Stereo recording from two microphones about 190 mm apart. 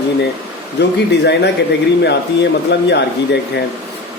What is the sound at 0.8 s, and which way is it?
Speech, 65° left (ahead or behind).